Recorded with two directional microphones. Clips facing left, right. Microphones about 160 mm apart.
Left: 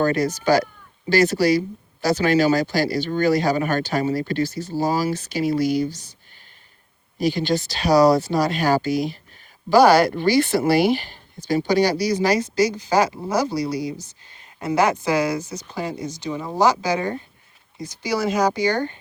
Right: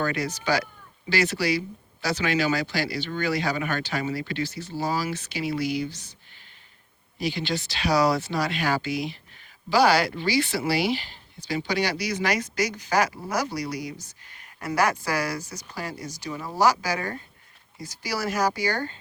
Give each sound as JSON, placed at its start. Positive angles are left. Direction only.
{"t": 0.0, "sound": "speech", "side_deg": 40}
{"t": 7.2, "sound": "speech", "side_deg": 45}